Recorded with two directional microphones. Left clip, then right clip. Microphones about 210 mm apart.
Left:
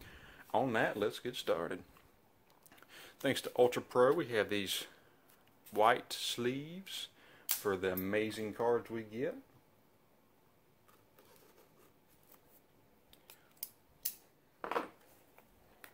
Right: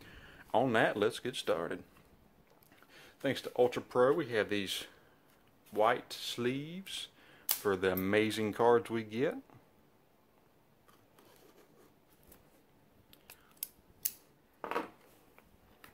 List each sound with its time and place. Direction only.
0.0 s speech: centre (ahead or behind)
6.4 s speech: 5° right (ahead or behind)
7.6 s speech: 10° right (ahead or behind)
7.9 s speech: 25° right (ahead or behind)